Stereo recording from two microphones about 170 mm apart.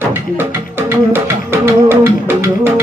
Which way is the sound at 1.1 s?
15° right (ahead or behind).